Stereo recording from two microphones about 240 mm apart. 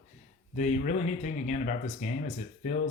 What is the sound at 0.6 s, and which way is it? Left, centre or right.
Speech, left.